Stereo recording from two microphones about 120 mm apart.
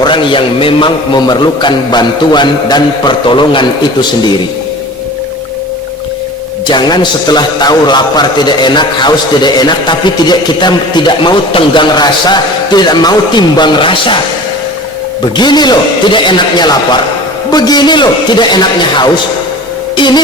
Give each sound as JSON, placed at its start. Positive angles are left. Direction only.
{"t": 0.0, "sound": "a man's voice", "side_deg": 45}
{"t": 6.7, "sound": "a man's voice", "side_deg": 40}
{"t": 15.4, "sound": "a man's voice", "side_deg": 35}